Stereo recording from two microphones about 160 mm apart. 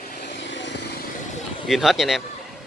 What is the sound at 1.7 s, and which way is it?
Speech, centre (ahead or behind).